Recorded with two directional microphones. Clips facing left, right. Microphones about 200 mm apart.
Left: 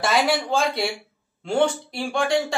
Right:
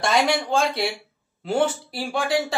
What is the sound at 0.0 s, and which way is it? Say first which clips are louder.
Speech: even; centre (ahead or behind).